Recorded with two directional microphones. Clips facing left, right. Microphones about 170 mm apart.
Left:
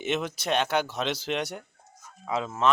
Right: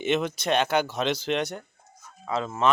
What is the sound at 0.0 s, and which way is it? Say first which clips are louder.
Speech: right 4 dB; 5° left (ahead or behind).